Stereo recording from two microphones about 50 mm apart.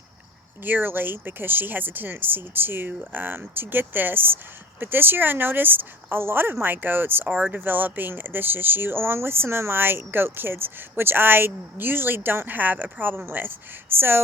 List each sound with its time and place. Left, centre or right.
0.6 s speech: right
7.3 s speech: right
7.6 s speech: right